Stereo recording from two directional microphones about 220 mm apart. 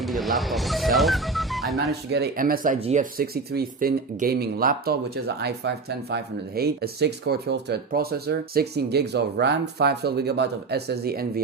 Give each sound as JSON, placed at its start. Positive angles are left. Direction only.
{"t": 0.0, "sound": "speech", "side_deg": 0}
{"t": 1.9, "sound": "speech", "side_deg": -50}